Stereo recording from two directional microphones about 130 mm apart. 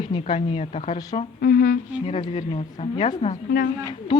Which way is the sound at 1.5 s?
90° left.